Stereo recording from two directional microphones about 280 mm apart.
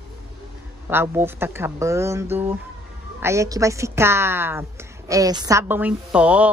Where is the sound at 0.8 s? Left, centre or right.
Centre.